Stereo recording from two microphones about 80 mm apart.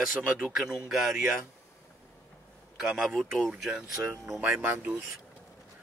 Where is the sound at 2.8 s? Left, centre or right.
Centre.